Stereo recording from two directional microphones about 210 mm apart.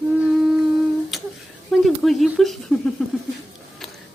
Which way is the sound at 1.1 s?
Centre (ahead or behind).